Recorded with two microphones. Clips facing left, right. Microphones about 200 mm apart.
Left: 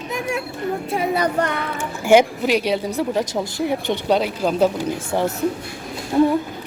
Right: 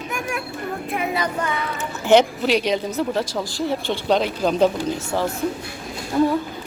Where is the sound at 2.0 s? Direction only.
10° left (ahead or behind); by 6.3 s 25° left (ahead or behind).